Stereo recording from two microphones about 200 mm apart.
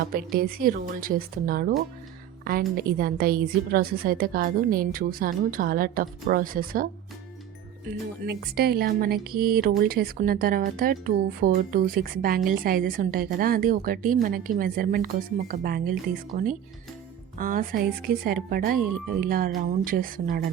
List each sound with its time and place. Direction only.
0.0 s a woman's voice: 50° right (ahead or behind)
8.3 s a woman's voice: 50° right (ahead or behind)